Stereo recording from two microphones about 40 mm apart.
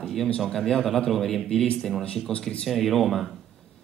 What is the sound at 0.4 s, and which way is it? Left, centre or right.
A man's voice, centre.